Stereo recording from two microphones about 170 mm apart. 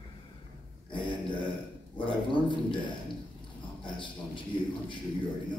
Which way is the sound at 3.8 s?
30° left (ahead or behind).